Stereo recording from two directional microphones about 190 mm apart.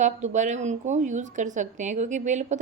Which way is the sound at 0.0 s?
40° right (ahead or behind).